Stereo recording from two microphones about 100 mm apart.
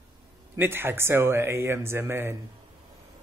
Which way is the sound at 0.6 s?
20° right (ahead or behind).